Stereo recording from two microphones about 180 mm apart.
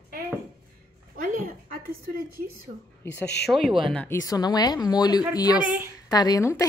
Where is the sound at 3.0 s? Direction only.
15° left (ahead or behind).